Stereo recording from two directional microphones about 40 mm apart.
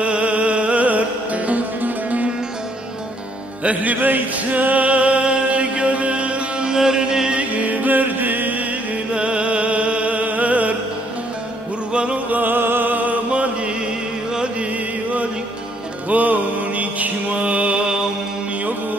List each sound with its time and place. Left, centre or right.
0.0 s music: right
3.6 s music: right
6.7 s music: centre
7.3 s music: right
9.1 s music: right
11.9 s music: right
12.3 s music: right
12.5 s music: right
12.9 s music: right
14.3 s music: right
16.1 s music: right